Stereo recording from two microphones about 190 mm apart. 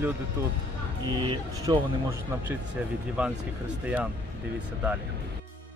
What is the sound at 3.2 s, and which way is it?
Speech, 5° right (ahead or behind).